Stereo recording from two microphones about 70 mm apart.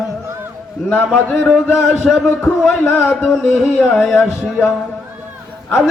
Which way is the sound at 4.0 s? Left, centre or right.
Centre.